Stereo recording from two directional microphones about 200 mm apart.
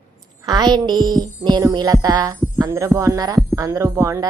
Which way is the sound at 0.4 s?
20° right (ahead or behind).